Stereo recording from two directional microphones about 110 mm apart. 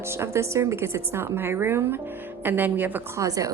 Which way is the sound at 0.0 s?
25° right (ahead or behind).